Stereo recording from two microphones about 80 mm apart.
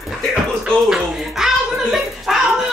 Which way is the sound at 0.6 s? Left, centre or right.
Centre.